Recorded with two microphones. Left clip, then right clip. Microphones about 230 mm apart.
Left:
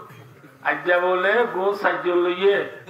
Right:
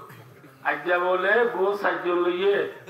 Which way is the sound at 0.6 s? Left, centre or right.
Left.